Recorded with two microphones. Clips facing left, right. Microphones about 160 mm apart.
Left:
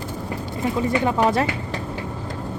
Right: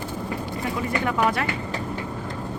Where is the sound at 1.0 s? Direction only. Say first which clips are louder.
Left 2 dB; 25° left (ahead or behind).